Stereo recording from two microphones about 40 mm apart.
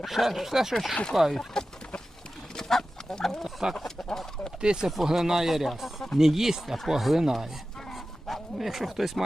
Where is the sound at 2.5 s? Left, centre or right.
Centre.